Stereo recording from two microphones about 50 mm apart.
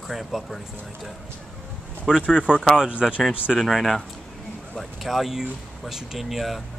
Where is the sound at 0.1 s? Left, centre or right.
Centre.